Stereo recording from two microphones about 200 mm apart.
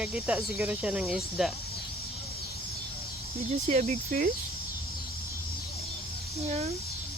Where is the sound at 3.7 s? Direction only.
35° right (ahead or behind).